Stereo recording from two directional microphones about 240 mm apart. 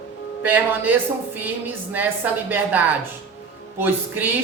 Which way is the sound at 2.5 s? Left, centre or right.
Centre.